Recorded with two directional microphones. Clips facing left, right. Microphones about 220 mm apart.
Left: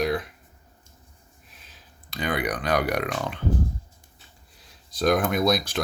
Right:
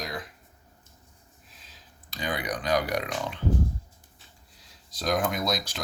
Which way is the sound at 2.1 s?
60° left (ahead or behind).